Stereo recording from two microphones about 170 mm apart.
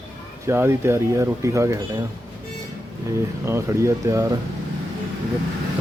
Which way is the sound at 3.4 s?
15° right (ahead or behind).